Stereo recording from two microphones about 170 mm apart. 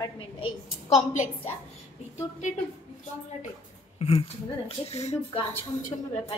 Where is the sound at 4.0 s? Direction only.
35° left (ahead or behind).